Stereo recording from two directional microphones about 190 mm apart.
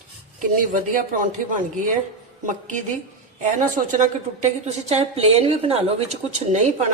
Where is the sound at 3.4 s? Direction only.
40° right (ahead or behind).